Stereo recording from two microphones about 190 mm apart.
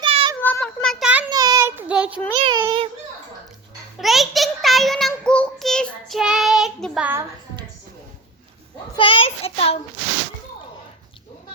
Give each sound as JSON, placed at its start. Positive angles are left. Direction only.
{"t": 0.0, "sound": "child singing", "side_deg": -30}
{"t": 0.3, "sound": "child singing", "side_deg": 10}
{"t": 1.3, "sound": "child singing", "side_deg": -20}
{"t": 2.3, "sound": "a child's voice", "side_deg": -25}
{"t": 3.9, "sound": "a child's voice", "side_deg": 0}
{"t": 9.0, "sound": "a child's voice", "side_deg": 30}